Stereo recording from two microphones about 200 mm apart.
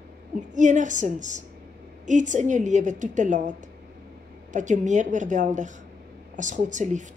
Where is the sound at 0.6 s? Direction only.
40° right (ahead or behind).